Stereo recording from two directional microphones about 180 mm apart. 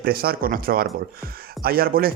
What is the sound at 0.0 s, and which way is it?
Speech, 55° right (ahead or behind).